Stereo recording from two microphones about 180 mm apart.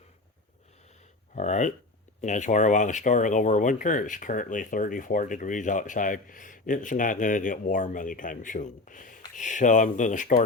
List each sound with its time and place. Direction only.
1.4 s speech: 40° left (ahead or behind)